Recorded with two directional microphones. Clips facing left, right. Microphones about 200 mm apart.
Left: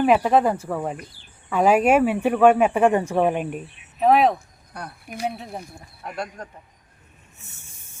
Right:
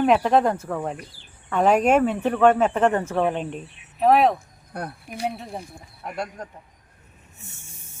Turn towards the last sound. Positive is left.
turn(degrees=-5)  # may be behind; listen again after turning